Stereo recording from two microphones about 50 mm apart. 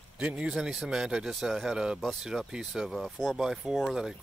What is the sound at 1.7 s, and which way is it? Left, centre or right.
Speech, centre.